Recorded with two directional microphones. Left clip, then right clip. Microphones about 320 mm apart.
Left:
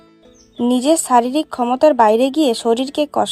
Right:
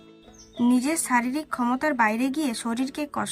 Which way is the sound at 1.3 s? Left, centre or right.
Centre.